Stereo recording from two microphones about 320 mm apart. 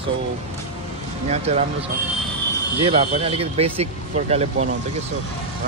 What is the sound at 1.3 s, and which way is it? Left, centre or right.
Speech, centre.